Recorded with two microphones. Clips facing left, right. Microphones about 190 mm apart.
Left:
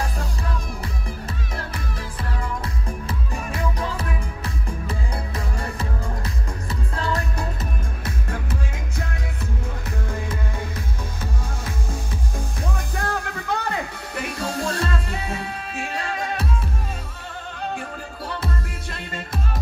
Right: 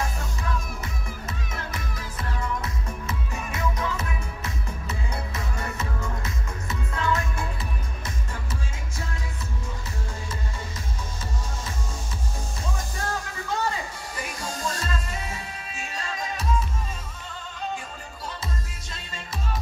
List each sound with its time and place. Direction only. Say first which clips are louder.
2.6 s music: left 3 dB; 30° left (ahead or behind)
8.0 s music: left 6 dB; 60° left (ahead or behind)
12.6 s music: left 3 dB; 60° left (ahead or behind)
18.2 s music: left 6 dB; 60° left (ahead or behind)